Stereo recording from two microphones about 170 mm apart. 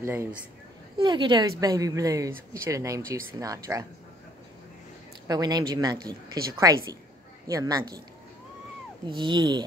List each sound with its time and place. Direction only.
0.0 s speech: 15° right (ahead or behind)
0.9 s speech: 30° right (ahead or behind)
5.3 s speech: 25° right (ahead or behind)
9.1 s speech: 25° right (ahead or behind)